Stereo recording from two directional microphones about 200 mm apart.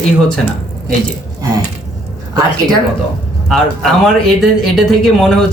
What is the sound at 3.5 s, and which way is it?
Speech, centre (ahead or behind).